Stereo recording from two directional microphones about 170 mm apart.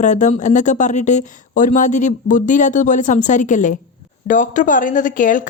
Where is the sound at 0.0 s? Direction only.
45° left (ahead or behind).